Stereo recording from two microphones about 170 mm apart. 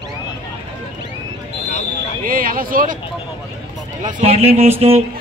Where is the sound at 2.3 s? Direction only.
55° right (ahead or behind).